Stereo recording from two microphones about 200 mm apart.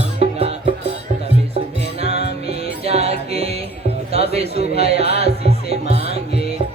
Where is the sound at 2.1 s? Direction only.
55° left (ahead or behind).